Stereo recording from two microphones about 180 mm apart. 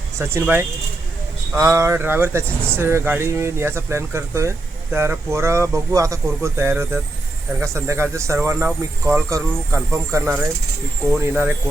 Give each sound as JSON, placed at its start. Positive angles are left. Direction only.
{"t": 0.2, "sound": "speech", "side_deg": -15}